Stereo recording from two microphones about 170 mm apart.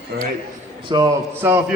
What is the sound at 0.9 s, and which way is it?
Speech, 25° right (ahead or behind).